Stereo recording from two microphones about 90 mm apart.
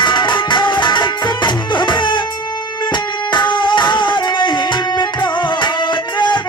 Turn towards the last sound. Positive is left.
turn(degrees=55)  # may be behind; listen again after turning